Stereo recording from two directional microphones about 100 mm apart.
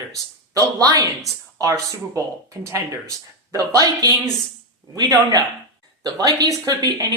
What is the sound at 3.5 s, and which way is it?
Speech, 40° right (ahead or behind).